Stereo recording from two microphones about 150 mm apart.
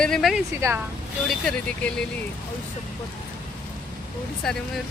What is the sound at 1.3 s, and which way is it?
Speech, 5° left (ahead or behind).